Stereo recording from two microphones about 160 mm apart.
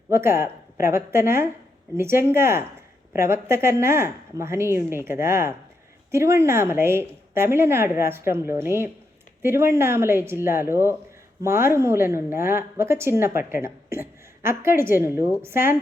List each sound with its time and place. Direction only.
0.1 s a woman's voice: 15° right (ahead or behind)